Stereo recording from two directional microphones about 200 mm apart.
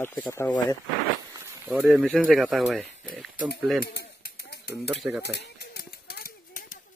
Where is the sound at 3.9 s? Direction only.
50° left (ahead or behind).